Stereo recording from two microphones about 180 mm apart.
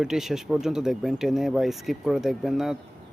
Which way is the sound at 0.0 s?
5° right (ahead or behind).